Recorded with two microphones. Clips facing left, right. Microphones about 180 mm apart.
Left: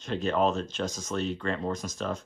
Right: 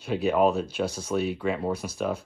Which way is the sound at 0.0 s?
10° right (ahead or behind).